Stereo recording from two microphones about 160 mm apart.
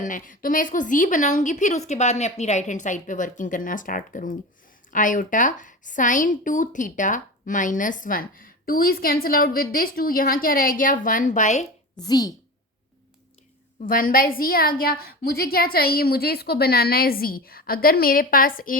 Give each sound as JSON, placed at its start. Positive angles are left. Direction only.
{"t": 0.0, "sound": "a woman's voice", "side_deg": 55}
{"t": 11.9, "sound": "a woman's voice", "side_deg": 25}
{"t": 13.8, "sound": "a woman's voice", "side_deg": 60}